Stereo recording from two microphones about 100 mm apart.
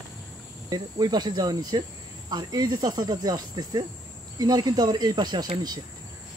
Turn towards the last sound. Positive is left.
turn(degrees=-45)  # may be behind; listen again after turning